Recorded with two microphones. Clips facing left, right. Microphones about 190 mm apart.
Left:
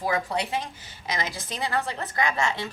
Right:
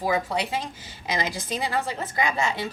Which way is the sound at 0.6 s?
15° right (ahead or behind).